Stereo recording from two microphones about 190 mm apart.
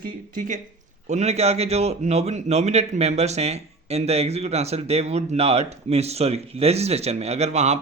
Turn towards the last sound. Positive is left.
turn(degrees=-35)  # may be behind; listen again after turning